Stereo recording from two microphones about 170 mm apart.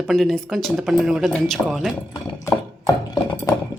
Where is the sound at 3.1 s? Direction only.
25° left (ahead or behind).